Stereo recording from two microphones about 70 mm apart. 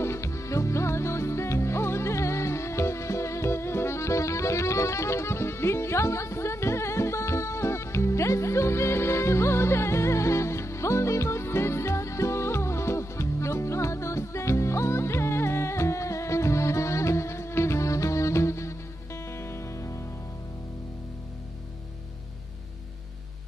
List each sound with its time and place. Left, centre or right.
0.0 s music: left